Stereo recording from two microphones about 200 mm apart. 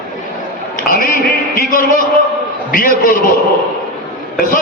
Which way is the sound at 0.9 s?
45° left (ahead or behind).